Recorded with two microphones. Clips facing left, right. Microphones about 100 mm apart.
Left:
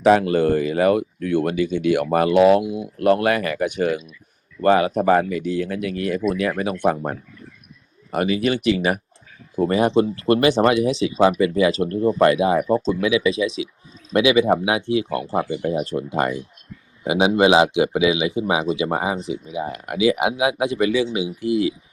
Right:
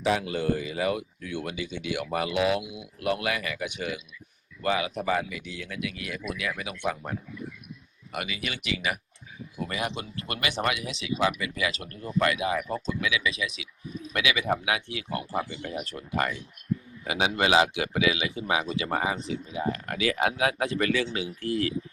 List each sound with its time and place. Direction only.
0.0 s speech: 60° left (ahead or behind); by 21.8 s 10° left (ahead or behind)